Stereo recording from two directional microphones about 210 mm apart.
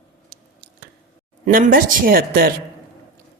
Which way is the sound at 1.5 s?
40° right (ahead or behind).